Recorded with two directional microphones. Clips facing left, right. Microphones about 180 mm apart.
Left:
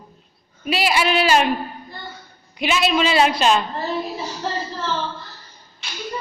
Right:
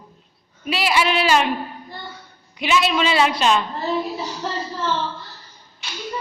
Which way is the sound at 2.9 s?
40° left (ahead or behind).